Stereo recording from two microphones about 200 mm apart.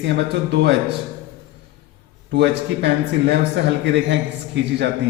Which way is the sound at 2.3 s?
60° right (ahead or behind).